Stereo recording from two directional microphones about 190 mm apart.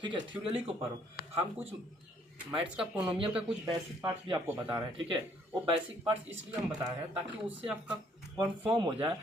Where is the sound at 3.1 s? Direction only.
25° right (ahead or behind).